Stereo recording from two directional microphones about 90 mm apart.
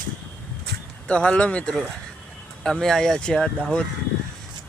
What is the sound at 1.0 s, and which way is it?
Speech, 10° left (ahead or behind).